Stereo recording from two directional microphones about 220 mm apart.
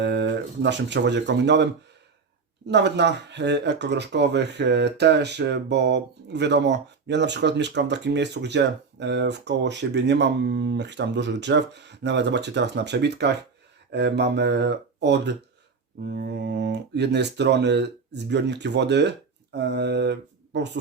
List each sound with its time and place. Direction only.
0.0 s speech: 50° right (ahead or behind)
2.6 s speech: 50° right (ahead or behind)
19.5 s mantra: 50° right (ahead or behind)